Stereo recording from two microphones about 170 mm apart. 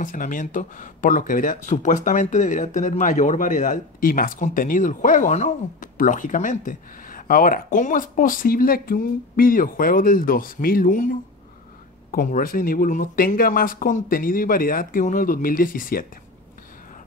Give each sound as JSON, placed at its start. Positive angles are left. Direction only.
{"t": 0.0, "sound": "speech", "side_deg": 50}